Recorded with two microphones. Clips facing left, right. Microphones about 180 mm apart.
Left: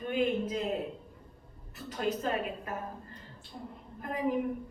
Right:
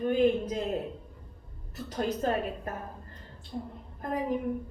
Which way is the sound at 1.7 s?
40° right (ahead or behind).